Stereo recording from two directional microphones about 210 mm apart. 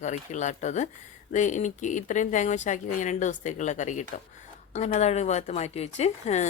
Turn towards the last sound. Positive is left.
turn(degrees=30)  # may be behind; listen again after turning